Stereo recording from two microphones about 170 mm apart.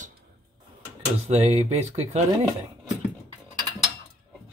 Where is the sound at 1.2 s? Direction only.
40° right (ahead or behind).